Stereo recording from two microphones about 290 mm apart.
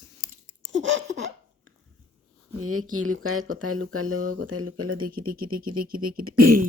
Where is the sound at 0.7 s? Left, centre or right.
Right.